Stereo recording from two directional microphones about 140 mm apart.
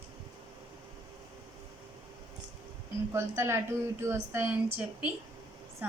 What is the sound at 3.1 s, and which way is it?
A woman's voice, 20° right (ahead or behind).